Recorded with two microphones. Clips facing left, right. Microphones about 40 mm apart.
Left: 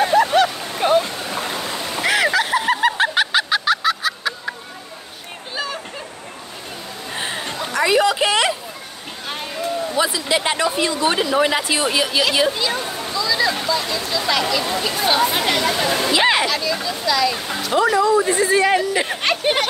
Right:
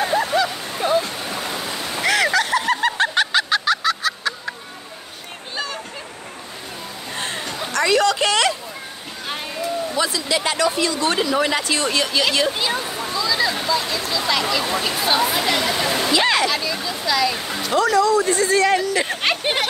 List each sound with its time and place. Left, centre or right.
0.1 s stream: left
1.8 s splash: centre
7.2 s a sound: centre
9.9 s speech: centre
13.1 s speech: centre
16.0 s speech: centre
16.4 s speech: centre
17.7 s speech: centre
19.2 s speech: centre